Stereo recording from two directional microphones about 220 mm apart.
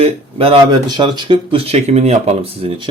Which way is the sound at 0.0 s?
25° right (ahead or behind).